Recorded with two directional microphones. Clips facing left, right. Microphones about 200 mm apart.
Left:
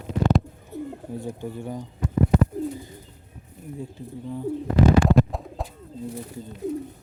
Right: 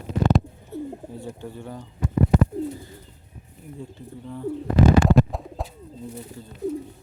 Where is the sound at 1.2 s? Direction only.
15° left (ahead or behind).